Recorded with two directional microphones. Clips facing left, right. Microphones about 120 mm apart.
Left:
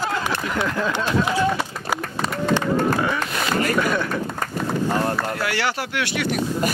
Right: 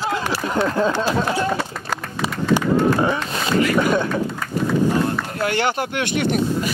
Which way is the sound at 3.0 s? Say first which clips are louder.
Right 3 dB; 30° right (ahead or behind).